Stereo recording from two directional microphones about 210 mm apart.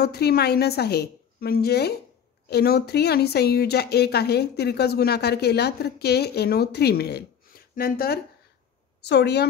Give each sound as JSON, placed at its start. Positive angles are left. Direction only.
{"t": 0.0, "sound": "speech", "side_deg": 50}